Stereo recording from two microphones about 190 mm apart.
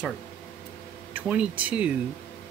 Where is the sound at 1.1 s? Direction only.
5° right (ahead or behind).